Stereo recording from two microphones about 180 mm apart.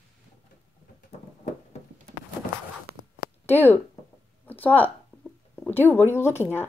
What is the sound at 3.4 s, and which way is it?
Speech, 10° left (ahead or behind).